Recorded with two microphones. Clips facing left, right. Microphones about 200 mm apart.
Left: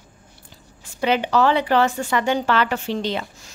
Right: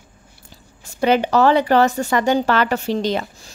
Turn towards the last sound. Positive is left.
turn(degrees=-40)  # may be behind; listen again after turning